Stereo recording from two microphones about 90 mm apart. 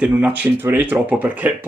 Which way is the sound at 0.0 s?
15° right (ahead or behind).